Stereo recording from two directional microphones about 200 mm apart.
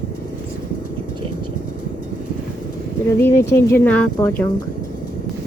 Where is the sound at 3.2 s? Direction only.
15° left (ahead or behind).